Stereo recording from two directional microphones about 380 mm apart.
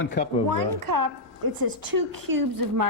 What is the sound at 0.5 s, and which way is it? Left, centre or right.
A woman's voice, right.